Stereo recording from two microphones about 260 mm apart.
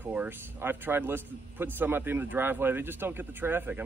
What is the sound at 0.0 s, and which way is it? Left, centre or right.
A man's voice, centre.